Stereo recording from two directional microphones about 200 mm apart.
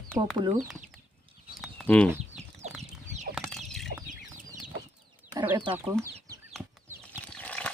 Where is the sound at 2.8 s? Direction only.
35° right (ahead or behind).